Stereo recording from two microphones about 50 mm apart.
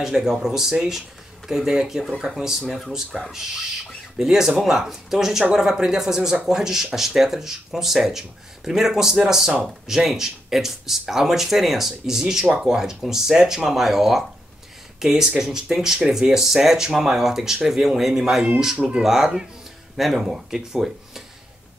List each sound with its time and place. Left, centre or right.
0.0 s speech: centre
18.8 s speech: right
19.0 s speech: centre